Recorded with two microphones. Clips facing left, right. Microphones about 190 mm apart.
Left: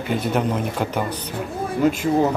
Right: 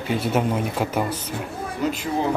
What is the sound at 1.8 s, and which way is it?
Speech, 50° left (ahead or behind).